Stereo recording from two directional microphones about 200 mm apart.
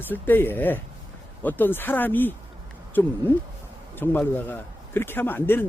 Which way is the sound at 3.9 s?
10° left (ahead or behind).